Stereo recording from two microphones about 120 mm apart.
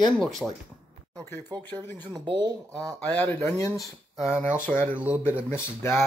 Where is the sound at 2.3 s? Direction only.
35° right (ahead or behind).